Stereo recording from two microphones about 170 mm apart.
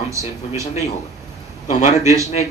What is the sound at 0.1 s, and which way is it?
Speech, 20° right (ahead or behind).